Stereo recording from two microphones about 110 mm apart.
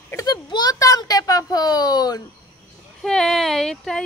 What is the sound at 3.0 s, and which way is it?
Speech, 5° left (ahead or behind).